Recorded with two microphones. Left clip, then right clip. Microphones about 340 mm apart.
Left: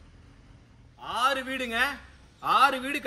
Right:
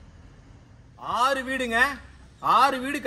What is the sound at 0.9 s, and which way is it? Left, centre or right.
A man's voice, centre.